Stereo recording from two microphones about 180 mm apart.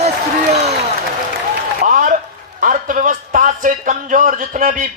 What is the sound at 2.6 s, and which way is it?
A man's voice, 50° right (ahead or behind).